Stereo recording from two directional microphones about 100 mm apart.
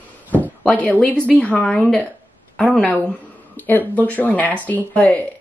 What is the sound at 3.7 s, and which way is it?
A woman's voice, 15° left (ahead or behind).